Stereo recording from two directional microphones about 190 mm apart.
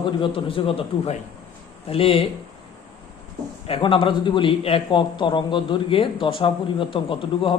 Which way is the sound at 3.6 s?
30° left (ahead or behind).